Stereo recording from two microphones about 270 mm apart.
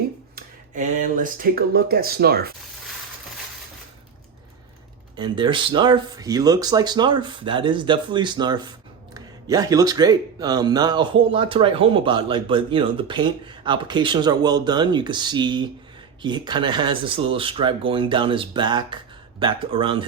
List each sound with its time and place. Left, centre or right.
0.3 s speech: right
5.1 s speech: centre